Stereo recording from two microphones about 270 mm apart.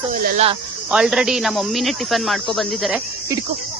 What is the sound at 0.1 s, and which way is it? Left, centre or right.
Speech, right.